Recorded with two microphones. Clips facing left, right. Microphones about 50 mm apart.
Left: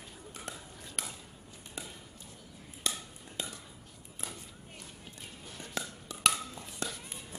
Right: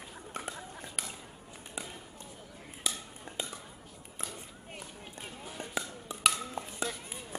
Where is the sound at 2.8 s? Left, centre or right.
Centre.